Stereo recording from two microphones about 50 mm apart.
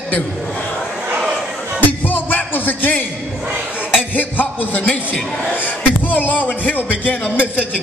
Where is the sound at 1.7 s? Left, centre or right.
Left.